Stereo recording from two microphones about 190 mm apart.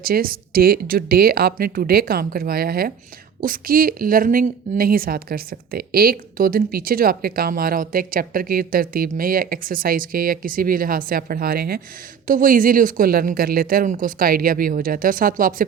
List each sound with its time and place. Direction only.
0.0 s a woman's voice: 50° right (ahead or behind)